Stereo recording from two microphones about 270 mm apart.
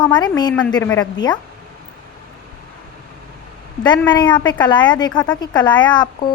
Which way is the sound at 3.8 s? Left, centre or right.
Centre.